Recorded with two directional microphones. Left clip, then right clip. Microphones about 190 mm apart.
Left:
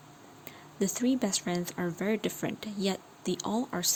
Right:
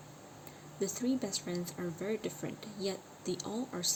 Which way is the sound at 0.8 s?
50° left (ahead or behind).